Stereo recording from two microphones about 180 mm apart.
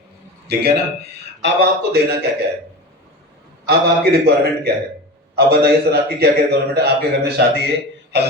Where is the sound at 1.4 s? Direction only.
75° right (ahead or behind).